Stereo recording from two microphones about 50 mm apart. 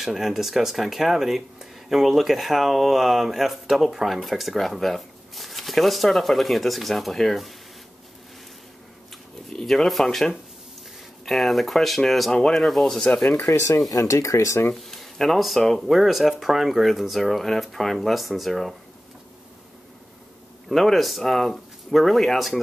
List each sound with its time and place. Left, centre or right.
0.0 s speech: centre
9.5 s speech: centre
12.3 s speech: centre
12.5 s speech: centre
13.4 s speech: left
14.8 s speech: centre
20.6 s speech: centre